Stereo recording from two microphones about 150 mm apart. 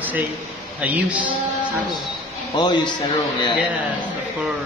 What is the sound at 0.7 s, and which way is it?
Speech, 10° right (ahead or behind).